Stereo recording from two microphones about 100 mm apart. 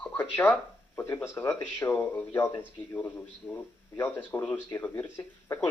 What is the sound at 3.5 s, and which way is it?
Speech, 20° left (ahead or behind).